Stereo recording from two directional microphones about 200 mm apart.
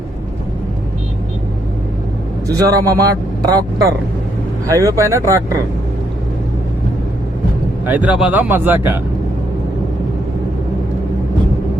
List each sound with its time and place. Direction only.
2.5 s speech: 15° right (ahead or behind)
7.9 s speech: 5° right (ahead or behind)